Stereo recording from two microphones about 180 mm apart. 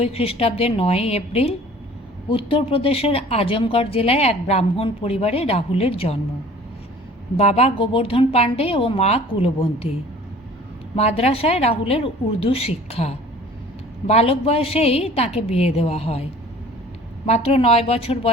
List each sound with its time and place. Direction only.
0.0 s a woman's voice: 35° left (ahead or behind)
7.3 s a woman's voice: 35° left (ahead or behind)
10.9 s a woman's voice: 35° left (ahead or behind)
17.2 s a woman's voice: 35° left (ahead or behind)